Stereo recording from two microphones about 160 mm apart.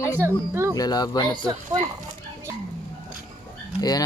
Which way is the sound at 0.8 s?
25° left (ahead or behind).